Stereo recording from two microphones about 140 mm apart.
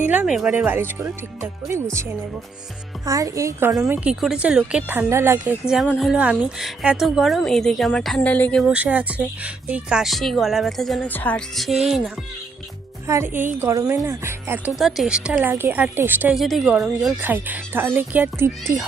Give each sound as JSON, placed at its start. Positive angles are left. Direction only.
{"t": 0.0, "sound": "speech", "side_deg": -10}
{"t": 3.1, "sound": "a woman's voice", "side_deg": -25}
{"t": 4.1, "sound": "speech", "side_deg": -5}
{"t": 5.6, "sound": "speech", "side_deg": -5}
{"t": 8.6, "sound": "speech", "side_deg": -10}
{"t": 11.1, "sound": "speech", "side_deg": 10}
{"t": 11.5, "sound": "speech", "side_deg": 0}
{"t": 13.1, "sound": "a woman's voice", "side_deg": -15}
{"t": 14.8, "sound": "speech", "side_deg": 0}
{"t": 16.3, "sound": "speech", "side_deg": 0}
{"t": 17.2, "sound": "speech", "side_deg": -15}